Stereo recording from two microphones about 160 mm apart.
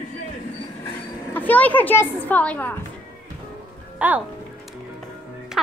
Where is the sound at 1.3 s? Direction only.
10° left (ahead or behind).